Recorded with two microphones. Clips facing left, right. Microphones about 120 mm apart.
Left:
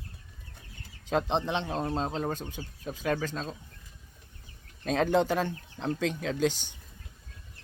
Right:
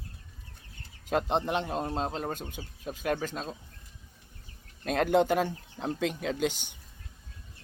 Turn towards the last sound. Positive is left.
turn(degrees=-15)  # may be behind; listen again after turning